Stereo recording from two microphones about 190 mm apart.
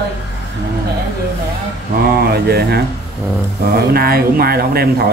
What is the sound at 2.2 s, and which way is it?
Speech, 55° right (ahead or behind).